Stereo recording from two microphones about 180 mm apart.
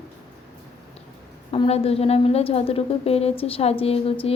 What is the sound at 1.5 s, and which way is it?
A woman's voice, 30° left (ahead or behind).